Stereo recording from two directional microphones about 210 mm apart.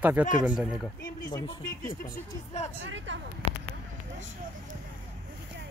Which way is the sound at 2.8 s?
60° right (ahead or behind).